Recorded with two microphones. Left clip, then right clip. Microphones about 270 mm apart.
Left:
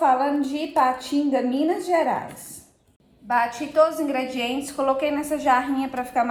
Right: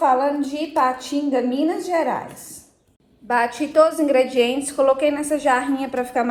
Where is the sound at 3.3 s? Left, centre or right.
Right.